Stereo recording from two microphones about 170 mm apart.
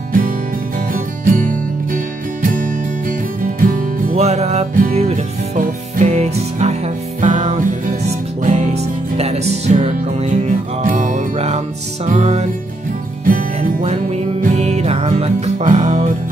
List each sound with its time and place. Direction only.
0.7 s music: 50° right (ahead or behind)
4.1 s music: 40° right (ahead or behind)
13.2 s music: 55° right (ahead or behind)
13.8 s music: 40° right (ahead or behind)